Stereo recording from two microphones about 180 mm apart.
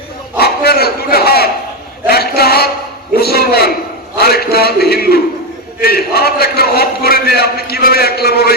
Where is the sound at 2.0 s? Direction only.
60° left (ahead or behind).